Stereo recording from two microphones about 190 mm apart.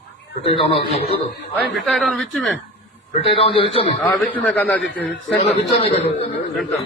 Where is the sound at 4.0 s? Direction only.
10° left (ahead or behind).